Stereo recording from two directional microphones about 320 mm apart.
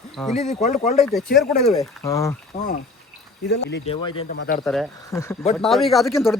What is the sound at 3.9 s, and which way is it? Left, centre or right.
Speech, centre.